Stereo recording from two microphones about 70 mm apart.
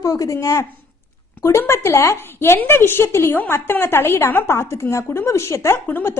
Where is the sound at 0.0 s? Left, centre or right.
Left.